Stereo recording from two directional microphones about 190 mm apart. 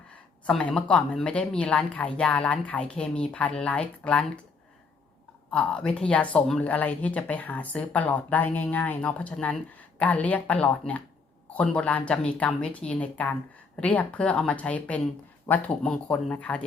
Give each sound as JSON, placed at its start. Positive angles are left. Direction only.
{"t": 0.4, "sound": "speech", "side_deg": 5}
{"t": 5.5, "sound": "speech", "side_deg": 5}